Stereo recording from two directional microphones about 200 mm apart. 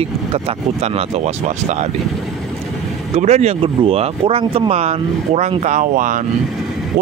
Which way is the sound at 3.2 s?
35° right (ahead or behind).